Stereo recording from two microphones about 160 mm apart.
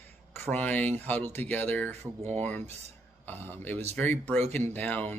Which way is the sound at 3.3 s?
10° left (ahead or behind).